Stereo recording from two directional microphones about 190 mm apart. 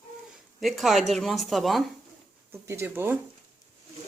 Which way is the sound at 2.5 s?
15° right (ahead or behind).